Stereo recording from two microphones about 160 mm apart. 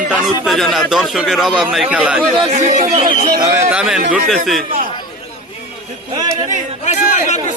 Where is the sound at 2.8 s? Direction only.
45° right (ahead or behind).